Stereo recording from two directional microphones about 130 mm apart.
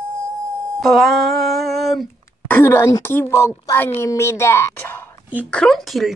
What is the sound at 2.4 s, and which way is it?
A woman's voice, 15° left (ahead or behind).